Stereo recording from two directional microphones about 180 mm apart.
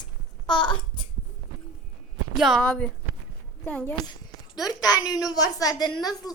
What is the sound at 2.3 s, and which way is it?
A woman's voice, centre (ahead or behind).